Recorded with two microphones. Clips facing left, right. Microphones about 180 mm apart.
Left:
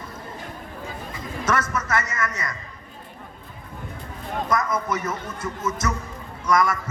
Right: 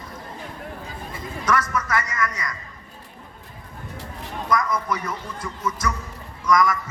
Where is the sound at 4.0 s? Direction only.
85° right.